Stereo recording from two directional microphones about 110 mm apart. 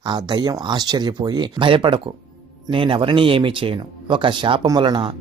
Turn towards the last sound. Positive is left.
turn(degrees=-45)  # may be behind; listen again after turning